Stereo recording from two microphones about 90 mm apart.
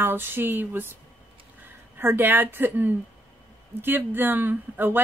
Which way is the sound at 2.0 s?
25° right (ahead or behind).